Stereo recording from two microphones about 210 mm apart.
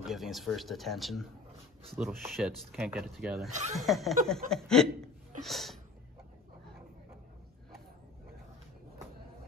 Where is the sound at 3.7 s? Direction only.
Centre (ahead or behind).